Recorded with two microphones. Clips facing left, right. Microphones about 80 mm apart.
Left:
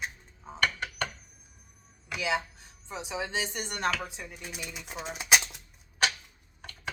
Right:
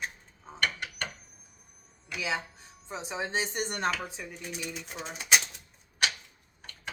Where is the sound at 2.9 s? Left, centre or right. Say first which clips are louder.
Even; right.